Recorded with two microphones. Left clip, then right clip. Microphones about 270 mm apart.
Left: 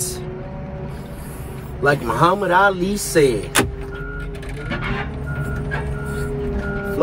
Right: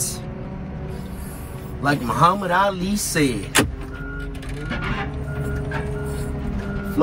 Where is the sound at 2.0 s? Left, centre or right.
Centre.